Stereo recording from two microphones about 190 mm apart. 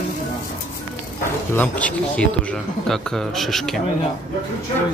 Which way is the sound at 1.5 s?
5° left (ahead or behind).